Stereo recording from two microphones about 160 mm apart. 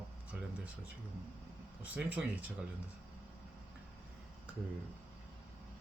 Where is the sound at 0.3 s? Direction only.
10° right (ahead or behind).